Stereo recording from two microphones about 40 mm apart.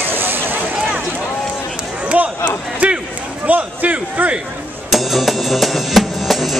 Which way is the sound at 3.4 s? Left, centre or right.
Right.